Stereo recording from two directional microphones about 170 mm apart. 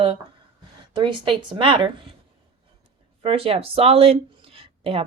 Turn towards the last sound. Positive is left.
turn(degrees=-35)  # may be behind; listen again after turning